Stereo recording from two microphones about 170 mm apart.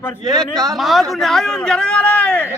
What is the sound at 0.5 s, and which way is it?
Speech, 20° right (ahead or behind).